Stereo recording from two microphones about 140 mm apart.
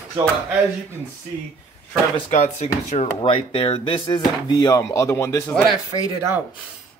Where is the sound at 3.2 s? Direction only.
40° left (ahead or behind).